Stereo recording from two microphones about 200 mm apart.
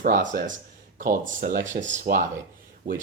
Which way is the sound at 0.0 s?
45° right (ahead or behind).